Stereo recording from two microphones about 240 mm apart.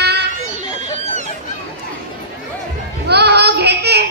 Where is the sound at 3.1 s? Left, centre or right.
Right.